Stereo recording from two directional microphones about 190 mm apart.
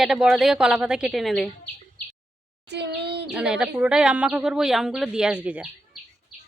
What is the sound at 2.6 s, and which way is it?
Speech, 60° right (ahead or behind).